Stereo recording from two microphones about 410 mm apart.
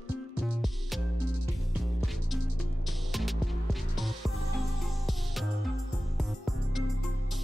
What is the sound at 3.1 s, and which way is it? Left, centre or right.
Music, centre.